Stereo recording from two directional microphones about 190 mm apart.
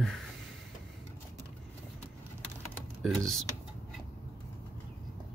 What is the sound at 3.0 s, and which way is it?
Speech, centre (ahead or behind).